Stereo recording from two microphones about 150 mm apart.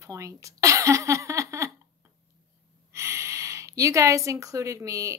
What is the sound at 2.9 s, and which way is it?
Speech, 20° right (ahead or behind).